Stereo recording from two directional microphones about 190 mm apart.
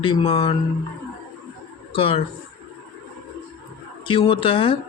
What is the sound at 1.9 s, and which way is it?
Music, 30° left (ahead or behind).